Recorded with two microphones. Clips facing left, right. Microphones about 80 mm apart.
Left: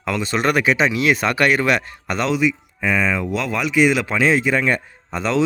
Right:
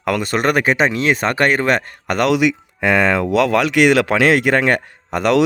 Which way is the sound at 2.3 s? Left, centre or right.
Right.